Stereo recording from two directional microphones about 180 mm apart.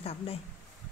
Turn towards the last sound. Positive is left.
turn(degrees=35)  # may be behind; listen again after turning